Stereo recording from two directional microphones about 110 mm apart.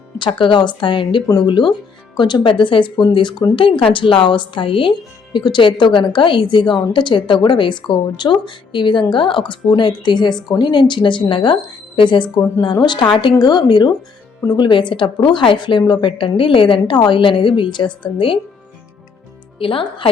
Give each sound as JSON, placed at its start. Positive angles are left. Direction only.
{"t": 0.2, "sound": "a woman's voice", "side_deg": 50}
{"t": 19.5, "sound": "speech", "side_deg": 55}